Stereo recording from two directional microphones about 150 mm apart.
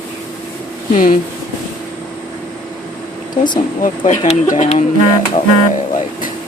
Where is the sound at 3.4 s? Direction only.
35° left (ahead or behind).